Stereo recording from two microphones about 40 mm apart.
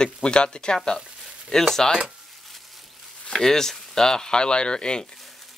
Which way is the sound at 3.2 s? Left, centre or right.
Centre.